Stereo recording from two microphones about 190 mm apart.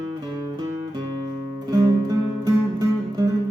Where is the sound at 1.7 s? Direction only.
20° right (ahead or behind).